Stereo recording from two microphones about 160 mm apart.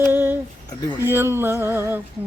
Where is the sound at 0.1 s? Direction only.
15° right (ahead or behind).